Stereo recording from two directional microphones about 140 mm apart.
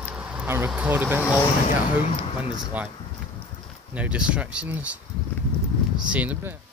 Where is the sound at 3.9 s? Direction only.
10° right (ahead or behind).